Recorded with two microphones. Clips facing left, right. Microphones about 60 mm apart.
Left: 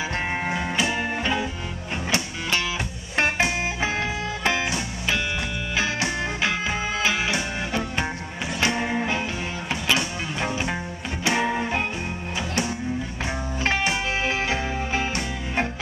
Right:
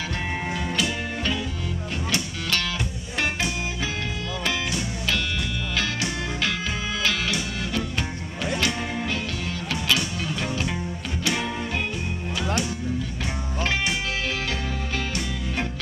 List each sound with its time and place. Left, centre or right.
0.5 s music: left
3.2 s organ: left
4.5 s music: left
13.7 s music: left